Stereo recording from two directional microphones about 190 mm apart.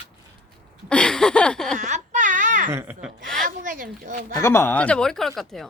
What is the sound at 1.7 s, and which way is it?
Baby cry, 40° right (ahead or behind).